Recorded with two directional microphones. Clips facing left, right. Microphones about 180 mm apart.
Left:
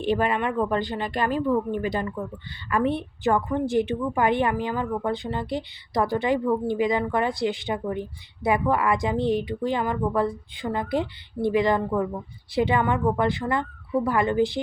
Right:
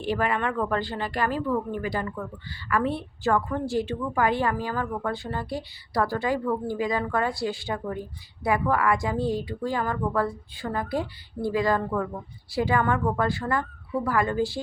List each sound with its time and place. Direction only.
0.0 s a woman's voice: 20° left (ahead or behind)